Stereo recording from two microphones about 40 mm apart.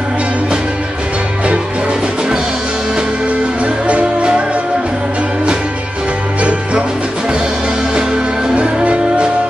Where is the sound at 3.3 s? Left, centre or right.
Right.